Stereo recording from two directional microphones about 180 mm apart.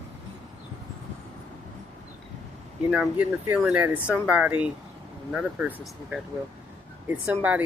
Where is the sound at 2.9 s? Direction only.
5° right (ahead or behind).